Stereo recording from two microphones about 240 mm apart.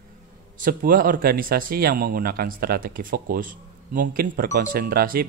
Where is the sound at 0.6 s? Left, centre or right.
Right.